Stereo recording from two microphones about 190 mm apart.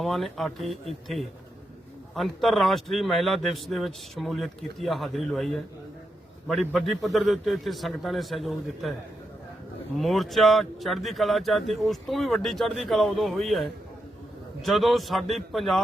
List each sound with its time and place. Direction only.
0.0 s speech: centre (ahead or behind)
10.0 s speech: centre (ahead or behind)